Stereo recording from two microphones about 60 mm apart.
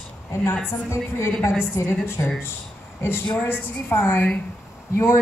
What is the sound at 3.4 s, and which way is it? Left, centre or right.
Speech, left.